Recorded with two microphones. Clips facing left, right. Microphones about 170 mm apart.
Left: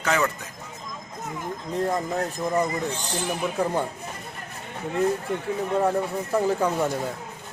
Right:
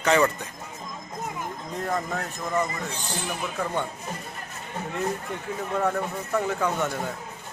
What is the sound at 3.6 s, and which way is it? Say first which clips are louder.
Speech: left 5 dB; 35° left (ahead or behind).